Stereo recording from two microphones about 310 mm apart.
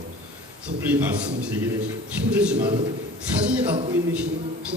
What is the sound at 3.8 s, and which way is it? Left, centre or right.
Speech, centre.